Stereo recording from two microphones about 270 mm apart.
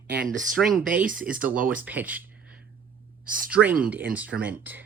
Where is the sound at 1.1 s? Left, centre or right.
Right.